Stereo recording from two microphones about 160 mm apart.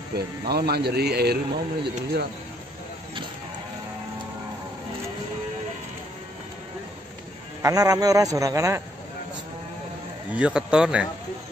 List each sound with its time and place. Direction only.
0.1 s speech: 85° right
7.6 s a man's voice: 20° right (ahead or behind)
10.3 s speech: 5° right (ahead or behind)